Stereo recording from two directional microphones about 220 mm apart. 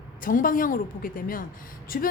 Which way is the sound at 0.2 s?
40° left (ahead or behind).